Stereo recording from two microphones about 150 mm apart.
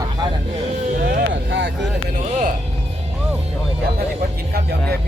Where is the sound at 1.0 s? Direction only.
90° right.